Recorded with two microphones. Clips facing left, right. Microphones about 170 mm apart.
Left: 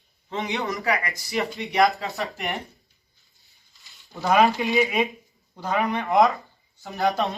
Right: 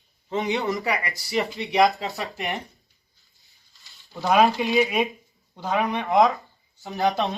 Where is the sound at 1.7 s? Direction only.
Centre (ahead or behind).